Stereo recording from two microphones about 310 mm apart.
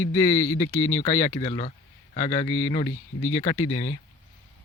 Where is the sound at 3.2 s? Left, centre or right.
Centre.